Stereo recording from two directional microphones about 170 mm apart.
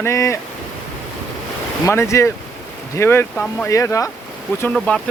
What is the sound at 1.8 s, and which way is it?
Speech, 15° left (ahead or behind).